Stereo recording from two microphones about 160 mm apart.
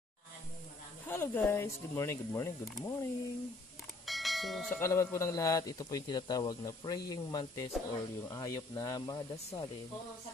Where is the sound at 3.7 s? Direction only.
Centre (ahead or behind).